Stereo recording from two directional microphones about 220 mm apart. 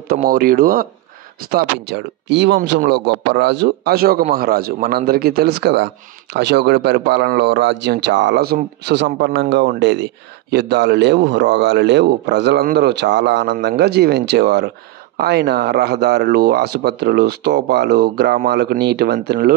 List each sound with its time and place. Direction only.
0.1 s a man's voice: 40° right (ahead or behind)